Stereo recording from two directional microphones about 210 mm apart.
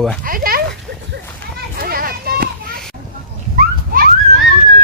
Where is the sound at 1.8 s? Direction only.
45° right (ahead or behind).